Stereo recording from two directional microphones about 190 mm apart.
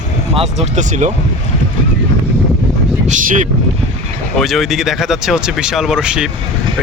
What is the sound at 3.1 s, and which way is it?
Speech, 40° right (ahead or behind).